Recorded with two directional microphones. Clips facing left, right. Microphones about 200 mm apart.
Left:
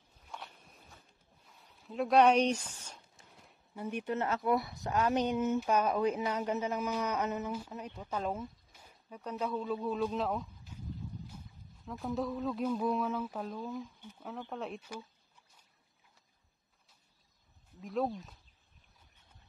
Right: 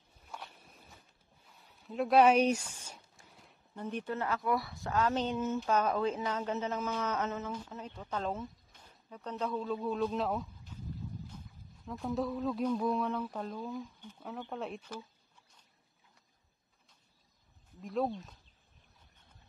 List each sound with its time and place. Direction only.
0.3 s walk: 5° right (ahead or behind)
1.4 s a sound: centre (ahead or behind)
3.3 s speech: centre (ahead or behind)
17.7 s speech: centre (ahead or behind)